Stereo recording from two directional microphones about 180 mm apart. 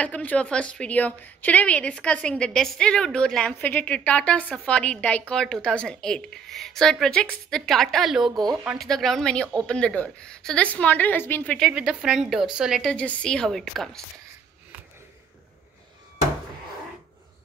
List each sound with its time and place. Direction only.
0.0 s a woman's voice: 10° left (ahead or behind)
8.3 s speech: 20° right (ahead or behind)
8.6 s a woman's voice: centre (ahead or behind)